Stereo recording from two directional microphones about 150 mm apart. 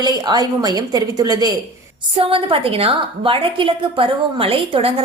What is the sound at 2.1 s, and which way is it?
A woman's voice, 35° right (ahead or behind).